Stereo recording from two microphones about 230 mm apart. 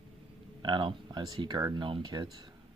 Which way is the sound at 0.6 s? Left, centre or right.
Centre.